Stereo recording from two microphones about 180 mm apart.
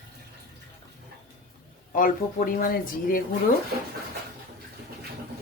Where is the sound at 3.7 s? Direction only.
60° right (ahead or behind).